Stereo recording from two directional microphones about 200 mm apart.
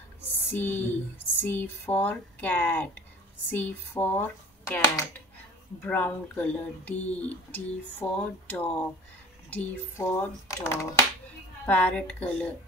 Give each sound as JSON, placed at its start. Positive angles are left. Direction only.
{"t": 0.5, "sound": "speech", "side_deg": 10}